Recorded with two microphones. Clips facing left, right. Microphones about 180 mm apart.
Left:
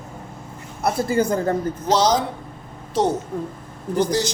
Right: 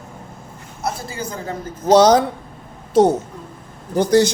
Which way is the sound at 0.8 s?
55° left (ahead or behind).